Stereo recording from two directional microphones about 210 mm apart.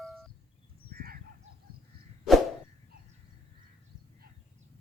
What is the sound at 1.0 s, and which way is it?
Goose, 45° right (ahead or behind).